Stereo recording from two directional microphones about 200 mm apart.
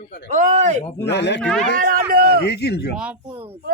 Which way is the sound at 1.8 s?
45° right (ahead or behind).